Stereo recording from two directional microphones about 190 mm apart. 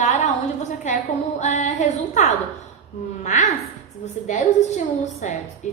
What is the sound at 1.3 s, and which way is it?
A woman's voice, 40° left (ahead or behind).